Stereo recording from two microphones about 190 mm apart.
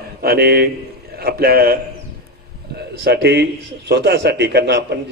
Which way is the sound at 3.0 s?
60° right (ahead or behind).